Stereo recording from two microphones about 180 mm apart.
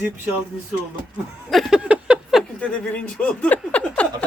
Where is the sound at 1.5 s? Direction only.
Centre (ahead or behind).